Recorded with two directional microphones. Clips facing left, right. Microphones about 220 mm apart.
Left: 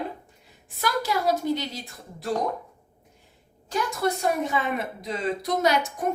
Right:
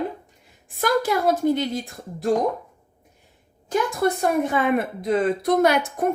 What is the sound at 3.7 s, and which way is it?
A woman's voice, 55° right (ahead or behind).